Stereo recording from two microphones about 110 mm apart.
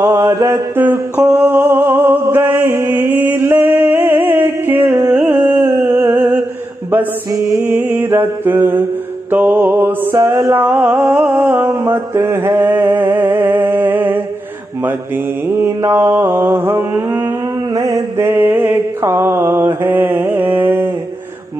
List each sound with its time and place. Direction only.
0.0 s mantra: 30° right (ahead or behind)
0.7 s a sound: 20° right (ahead or behind)
9.3 s music: 20° right (ahead or behind)
10.1 s music: 30° right (ahead or behind)
15.4 s music: 20° right (ahead or behind)
17.7 s mantra: 30° right (ahead or behind)